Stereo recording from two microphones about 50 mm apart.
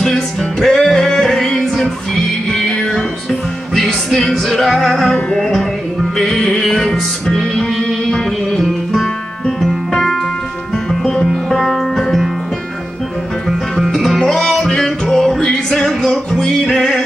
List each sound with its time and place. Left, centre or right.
0.0 s music: centre
2.7 s music: centre
3.3 s music: centre
11.4 s music: centre
13.9 s music: centre